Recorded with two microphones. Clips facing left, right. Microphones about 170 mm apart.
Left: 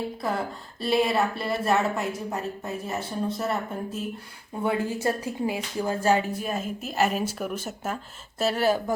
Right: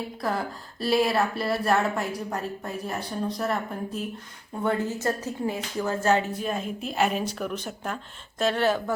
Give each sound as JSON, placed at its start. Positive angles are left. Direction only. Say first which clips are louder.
{"t": 0.2, "sound": "a woman's voice", "louder": "even", "side_deg": 0}